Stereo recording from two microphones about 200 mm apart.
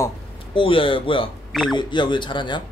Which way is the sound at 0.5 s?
25° left (ahead or behind).